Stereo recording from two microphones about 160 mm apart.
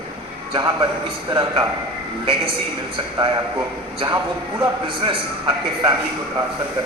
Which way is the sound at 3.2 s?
25° right (ahead or behind).